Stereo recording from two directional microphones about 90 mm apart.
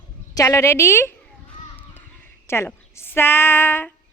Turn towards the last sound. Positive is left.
turn(degrees=25)  # may be behind; listen again after turning